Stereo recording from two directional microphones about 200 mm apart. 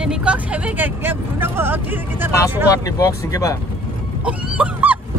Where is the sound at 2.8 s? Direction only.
15° left (ahead or behind).